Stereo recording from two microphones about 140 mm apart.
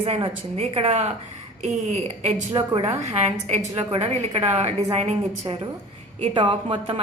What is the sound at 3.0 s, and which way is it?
A woman's voice, 50° right (ahead or behind).